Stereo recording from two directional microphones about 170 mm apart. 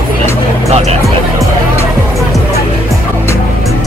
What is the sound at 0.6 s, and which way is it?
Music, 40° right (ahead or behind).